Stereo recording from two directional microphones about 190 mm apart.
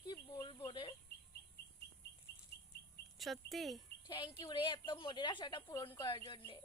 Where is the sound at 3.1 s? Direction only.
Centre (ahead or behind).